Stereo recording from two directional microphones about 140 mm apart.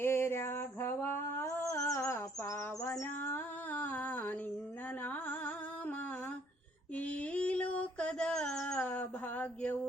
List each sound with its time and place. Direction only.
0.0 s a sound: 15° left (ahead or behind)
5.0 s music: 10° left (ahead or behind)
6.9 s mantra: 10° left (ahead or behind)